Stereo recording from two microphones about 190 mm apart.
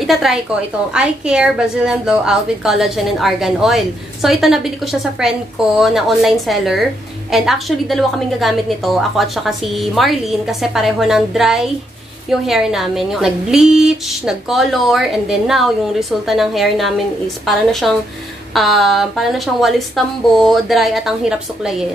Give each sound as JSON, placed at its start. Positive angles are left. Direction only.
{"t": 0.0, "sound": "a woman's voice", "side_deg": 0}